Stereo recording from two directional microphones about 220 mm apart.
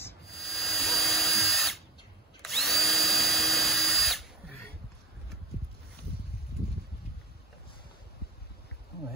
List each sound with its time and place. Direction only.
0.0 s drill: centre (ahead or behind)